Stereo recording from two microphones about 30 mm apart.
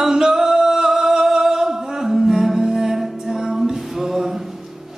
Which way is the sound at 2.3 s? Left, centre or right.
Centre.